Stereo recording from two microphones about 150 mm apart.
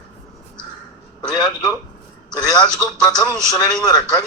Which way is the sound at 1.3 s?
25° left (ahead or behind).